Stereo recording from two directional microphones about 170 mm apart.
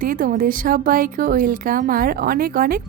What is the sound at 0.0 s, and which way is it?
A woman's voice, 55° right (ahead or behind).